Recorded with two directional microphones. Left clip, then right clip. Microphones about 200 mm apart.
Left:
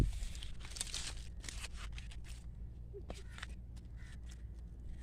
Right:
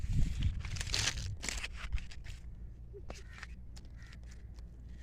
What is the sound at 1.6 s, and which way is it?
Scissors, 40° right (ahead or behind).